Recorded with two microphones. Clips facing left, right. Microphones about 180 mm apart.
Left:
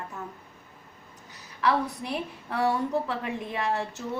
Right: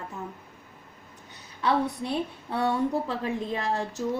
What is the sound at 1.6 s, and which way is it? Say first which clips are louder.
A woman's voice: right 1 dB; 30° right (ahead or behind).